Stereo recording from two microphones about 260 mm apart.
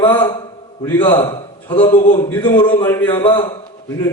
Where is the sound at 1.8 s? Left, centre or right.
Left.